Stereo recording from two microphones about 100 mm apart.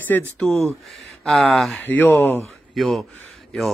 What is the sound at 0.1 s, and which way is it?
Speech, 15° left (ahead or behind).